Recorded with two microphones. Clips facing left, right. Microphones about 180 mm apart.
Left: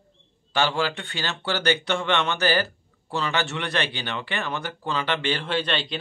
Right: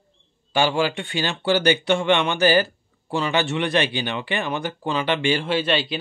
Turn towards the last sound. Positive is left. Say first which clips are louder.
# right 4 dB
turn(degrees=-5)  # may be behind; listen again after turning